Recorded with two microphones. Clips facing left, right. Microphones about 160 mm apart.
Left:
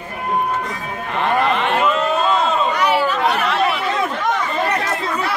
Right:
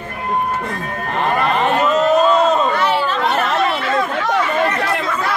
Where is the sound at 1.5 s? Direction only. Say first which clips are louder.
Right 2 dB; 40° right (ahead or behind).